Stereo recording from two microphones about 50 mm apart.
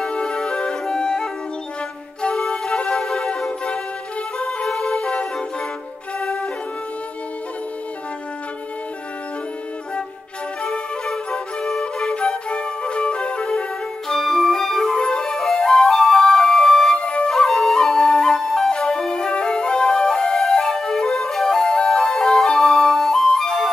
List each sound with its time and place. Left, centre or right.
0.0 s music: centre
2.2 s flute: centre
3.0 s wind instrument: centre
3.3 s music: centre
6.1 s flute: left
10.6 s music: centre
11.8 s flute: left
14.0 s flute: centre
17.3 s flute: centre